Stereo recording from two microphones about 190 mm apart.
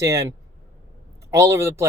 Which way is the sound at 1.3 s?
15° right (ahead or behind).